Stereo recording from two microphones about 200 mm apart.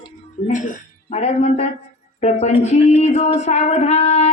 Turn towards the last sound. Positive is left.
turn(degrees=35)  # may be behind; listen again after turning